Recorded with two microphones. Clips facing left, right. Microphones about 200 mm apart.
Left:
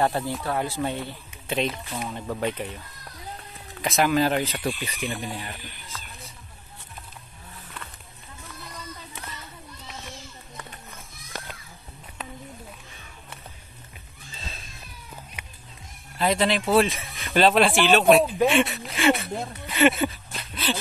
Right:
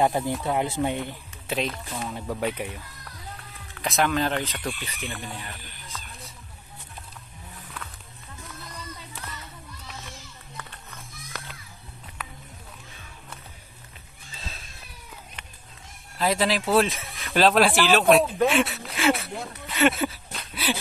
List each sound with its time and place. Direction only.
0.0 s speech: 15° right (ahead or behind)
1.5 s speech: centre (ahead or behind)
3.8 s speech: centre (ahead or behind)
11.2 s a sound: 30° left (ahead or behind)
14.4 s cat: centre (ahead or behind)
16.2 s speech: centre (ahead or behind)
18.9 s a sound: centre (ahead or behind)
19.8 s speech: centre (ahead or behind)
20.5 s dog: 15° right (ahead or behind)